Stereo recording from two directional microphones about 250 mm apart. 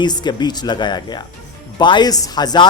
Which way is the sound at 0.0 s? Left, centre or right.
Centre.